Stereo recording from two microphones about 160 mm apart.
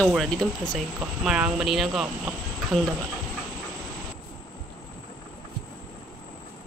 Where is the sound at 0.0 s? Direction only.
Centre (ahead or behind).